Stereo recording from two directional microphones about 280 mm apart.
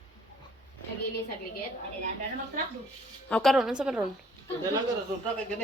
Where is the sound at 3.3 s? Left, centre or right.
Centre.